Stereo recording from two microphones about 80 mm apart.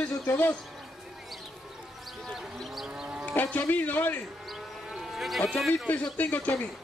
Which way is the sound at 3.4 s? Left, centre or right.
Left.